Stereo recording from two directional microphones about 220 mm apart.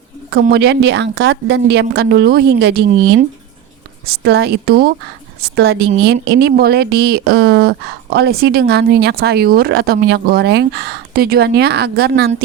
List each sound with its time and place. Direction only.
0.4 s speech: 50° right (ahead or behind)
4.2 s speech: 50° right (ahead or behind)